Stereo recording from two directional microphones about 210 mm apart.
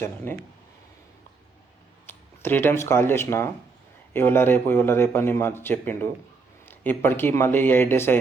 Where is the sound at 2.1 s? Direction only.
10° left (ahead or behind).